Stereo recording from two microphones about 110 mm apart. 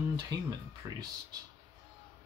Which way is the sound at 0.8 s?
20° right (ahead or behind).